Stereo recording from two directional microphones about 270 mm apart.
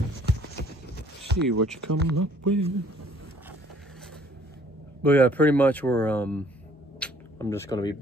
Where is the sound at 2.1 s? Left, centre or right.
Right.